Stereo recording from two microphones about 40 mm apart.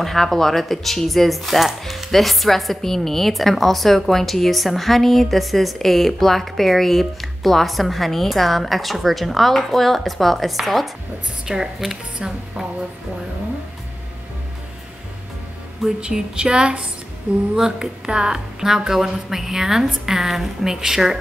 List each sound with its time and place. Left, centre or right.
0.0 s speech: centre
11.4 s a woman's voice: centre
16.0 s a woman's voice: centre